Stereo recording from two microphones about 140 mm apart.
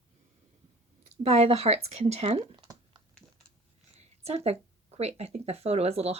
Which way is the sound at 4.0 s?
50° right (ahead or behind).